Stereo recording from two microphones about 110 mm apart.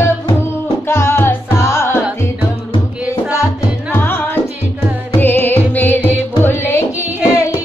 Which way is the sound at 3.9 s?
20° left (ahead or behind).